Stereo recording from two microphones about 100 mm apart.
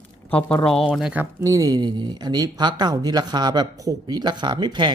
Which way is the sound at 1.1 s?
25° right (ahead or behind).